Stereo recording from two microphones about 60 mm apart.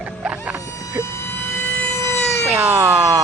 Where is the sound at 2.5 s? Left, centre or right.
Right.